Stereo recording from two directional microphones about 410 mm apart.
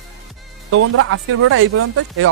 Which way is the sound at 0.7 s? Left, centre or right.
Right.